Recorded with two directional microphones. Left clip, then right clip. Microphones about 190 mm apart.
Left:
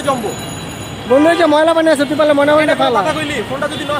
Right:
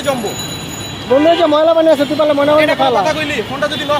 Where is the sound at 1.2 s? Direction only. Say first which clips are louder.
Right 1 dB; 20° left (ahead or behind).